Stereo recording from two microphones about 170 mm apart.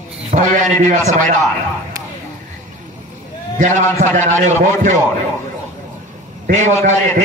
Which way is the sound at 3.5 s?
45° right (ahead or behind).